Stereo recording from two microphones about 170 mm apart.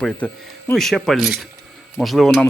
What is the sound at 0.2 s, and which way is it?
Speech, 10° left (ahead or behind).